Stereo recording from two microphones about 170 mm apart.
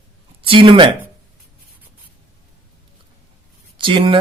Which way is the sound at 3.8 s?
30° right (ahead or behind).